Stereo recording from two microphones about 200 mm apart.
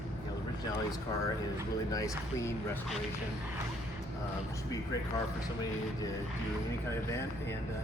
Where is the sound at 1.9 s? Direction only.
15° left (ahead or behind).